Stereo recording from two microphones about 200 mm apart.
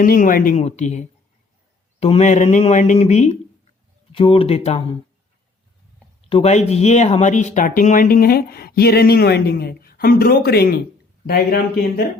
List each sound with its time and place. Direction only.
0.0 s speech: 45° left (ahead or behind)
6.2 s speech: 30° left (ahead or behind); by 12.0 s 50° left (ahead or behind)